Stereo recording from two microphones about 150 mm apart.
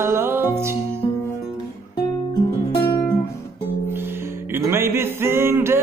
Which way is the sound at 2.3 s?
35° left (ahead or behind).